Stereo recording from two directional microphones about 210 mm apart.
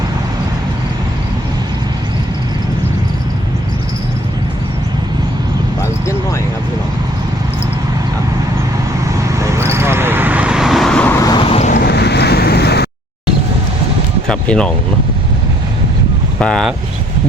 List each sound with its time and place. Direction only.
9.4 s vehicle: 15° right (ahead or behind); by 11.3 s 15° left (ahead or behind)
11.4 s vehicle: 30° left (ahead or behind)
11.9 s boat: 50° left (ahead or behind)
14.3 s speech: 5° left (ahead or behind)
16.4 s speech: 5° left (ahead or behind)